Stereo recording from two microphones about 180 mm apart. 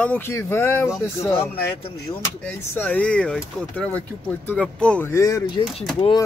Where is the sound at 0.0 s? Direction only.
10° left (ahead or behind).